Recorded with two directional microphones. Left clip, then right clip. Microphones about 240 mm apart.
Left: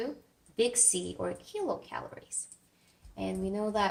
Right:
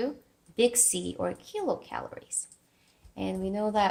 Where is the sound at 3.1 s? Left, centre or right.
Right.